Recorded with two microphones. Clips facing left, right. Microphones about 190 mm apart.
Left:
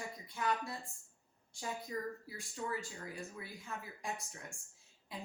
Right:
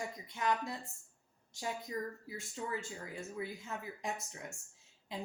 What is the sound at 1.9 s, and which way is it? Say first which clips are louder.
Speech: right 1 dB; 20° right (ahead or behind).